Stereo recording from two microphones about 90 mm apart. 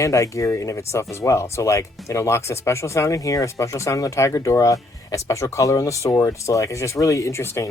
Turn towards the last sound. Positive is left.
turn(degrees=30)  # may be behind; listen again after turning